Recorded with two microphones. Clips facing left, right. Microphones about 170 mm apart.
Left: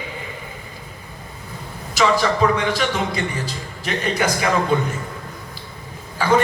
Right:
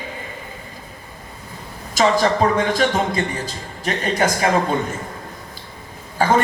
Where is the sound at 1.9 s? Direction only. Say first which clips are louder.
Right 2 dB; 45° right (ahead or behind).